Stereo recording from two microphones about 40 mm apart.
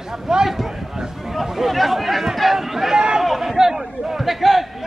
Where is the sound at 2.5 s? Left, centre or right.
Centre.